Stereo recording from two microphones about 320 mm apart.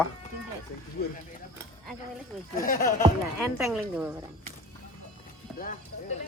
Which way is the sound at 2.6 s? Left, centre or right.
Left.